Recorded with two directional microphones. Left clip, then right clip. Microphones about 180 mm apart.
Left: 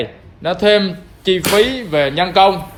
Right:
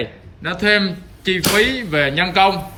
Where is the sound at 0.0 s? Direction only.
10° left (ahead or behind).